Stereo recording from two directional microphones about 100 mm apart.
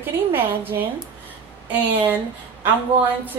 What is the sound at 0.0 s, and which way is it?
A woman's voice, 20° right (ahead or behind).